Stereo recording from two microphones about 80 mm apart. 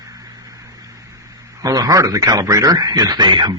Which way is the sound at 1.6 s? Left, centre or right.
Right.